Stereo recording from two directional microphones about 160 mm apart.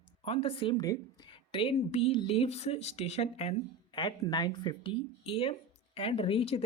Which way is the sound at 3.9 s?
25° left (ahead or behind).